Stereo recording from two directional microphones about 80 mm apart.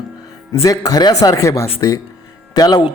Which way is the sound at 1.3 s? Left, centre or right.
Left.